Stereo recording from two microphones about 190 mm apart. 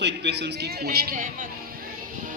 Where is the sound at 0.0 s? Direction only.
65° right (ahead or behind).